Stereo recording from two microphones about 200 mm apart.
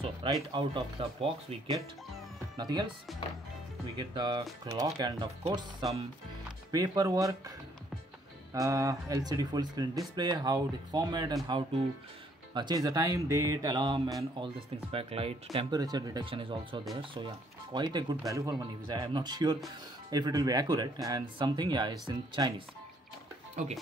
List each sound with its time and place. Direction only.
0.0 s speech: 25° right (ahead or behind)
4.1 s speech: 20° right (ahead or behind)
8.5 s speech: 15° right (ahead or behind)
23.6 s speech: 40° right (ahead or behind)